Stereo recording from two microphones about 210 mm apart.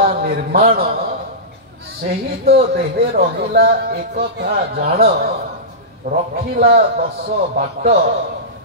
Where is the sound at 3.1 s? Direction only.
50° right (ahead or behind).